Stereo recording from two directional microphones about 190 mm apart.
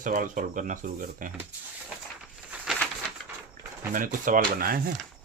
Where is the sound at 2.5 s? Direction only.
10° right (ahead or behind).